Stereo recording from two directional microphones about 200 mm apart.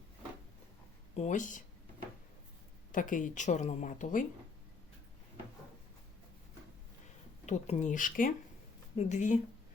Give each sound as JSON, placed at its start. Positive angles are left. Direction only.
{"t": 1.1, "sound": "speech", "side_deg": 35}
{"t": 2.9, "sound": "speech", "side_deg": 40}
{"t": 7.4, "sound": "speech", "side_deg": 35}